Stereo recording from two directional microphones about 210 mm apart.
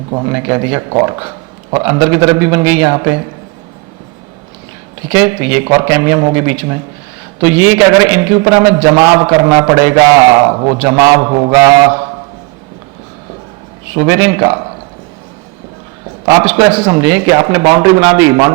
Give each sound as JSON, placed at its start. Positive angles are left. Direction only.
{"t": 0.1, "sound": "speech", "side_deg": -25}
{"t": 0.3, "sound": "a man's voice", "side_deg": -15}
{"t": 5.1, "sound": "a man's voice", "side_deg": -10}
{"t": 13.9, "sound": "a man's voice", "side_deg": -20}
{"t": 16.2, "sound": "a man's voice", "side_deg": -15}